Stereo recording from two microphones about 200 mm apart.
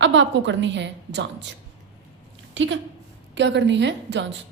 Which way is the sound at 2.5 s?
70° right (ahead or behind).